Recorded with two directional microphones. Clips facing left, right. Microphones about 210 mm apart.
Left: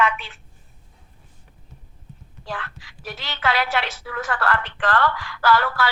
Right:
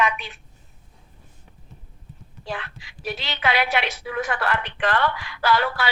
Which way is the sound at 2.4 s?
15° right (ahead or behind).